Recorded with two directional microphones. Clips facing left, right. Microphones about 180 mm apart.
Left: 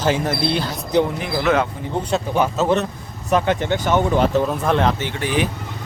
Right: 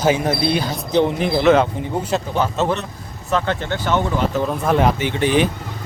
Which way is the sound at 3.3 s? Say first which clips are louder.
Left 3 dB; 15° left (ahead or behind).